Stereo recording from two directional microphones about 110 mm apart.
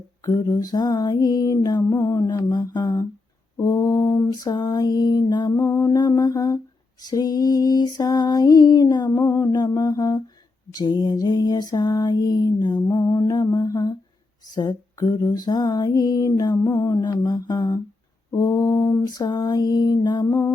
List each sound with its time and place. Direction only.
0.3 s lullaby: 35° left (ahead or behind)
5.5 s lullaby: 25° left (ahead or behind)
20.2 s music: 25° left (ahead or behind)